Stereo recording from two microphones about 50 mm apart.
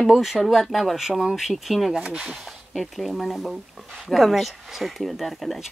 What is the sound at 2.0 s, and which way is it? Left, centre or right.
Speech, centre.